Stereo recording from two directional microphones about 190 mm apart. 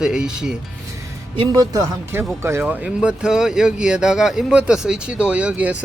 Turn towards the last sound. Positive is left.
turn(degrees=-5)  # may be behind; listen again after turning